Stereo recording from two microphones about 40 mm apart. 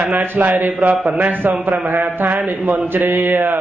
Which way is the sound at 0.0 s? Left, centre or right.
Right.